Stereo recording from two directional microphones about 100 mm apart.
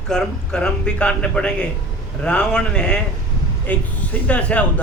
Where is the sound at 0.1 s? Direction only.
5° left (ahead or behind).